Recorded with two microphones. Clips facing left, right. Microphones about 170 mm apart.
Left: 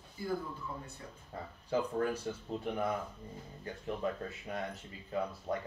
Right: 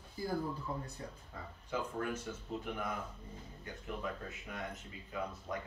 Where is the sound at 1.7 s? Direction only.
35° left (ahead or behind).